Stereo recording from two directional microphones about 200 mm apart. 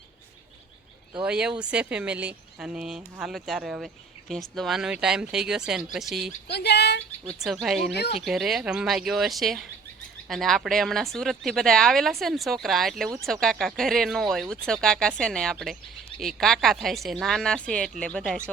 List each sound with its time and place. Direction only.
1.2 s speech: 5° right (ahead or behind)
6.5 s speech: 55° left (ahead or behind)
7.3 s speech: centre (ahead or behind)